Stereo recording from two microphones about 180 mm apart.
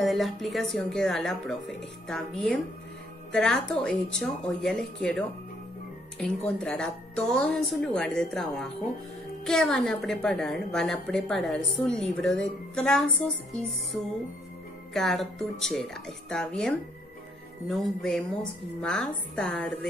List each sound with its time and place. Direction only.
0.0 s a woman's voice: centre (ahead or behind)
6.6 s a woman's voice: 5° left (ahead or behind)
15.0 s a woman's voice: centre (ahead or behind)